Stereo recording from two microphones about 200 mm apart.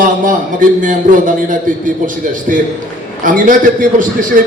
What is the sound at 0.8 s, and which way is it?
A man's voice, 40° right (ahead or behind).